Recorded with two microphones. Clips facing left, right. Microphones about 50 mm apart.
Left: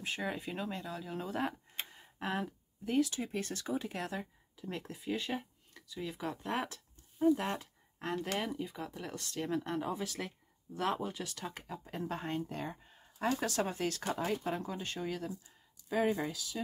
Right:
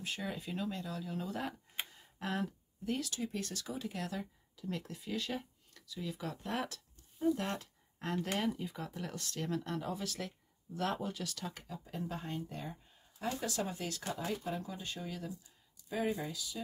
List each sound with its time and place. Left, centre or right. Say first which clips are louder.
0.0 s speech: left 3 dB; left; by 9.5 s centre
9.5 s speech: left 3 dB; left
11.6 s speech: left 2 dB; left
12.4 s speech: left 4 dB; left
13.5 s speech: left 4 dB; left
14.6 s speech: left 4 dB; left